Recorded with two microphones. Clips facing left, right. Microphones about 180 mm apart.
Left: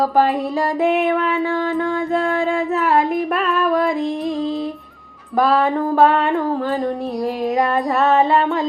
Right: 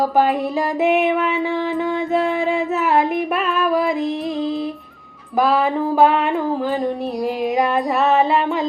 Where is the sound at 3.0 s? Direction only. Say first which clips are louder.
Left 1 dB; centre (ahead or behind).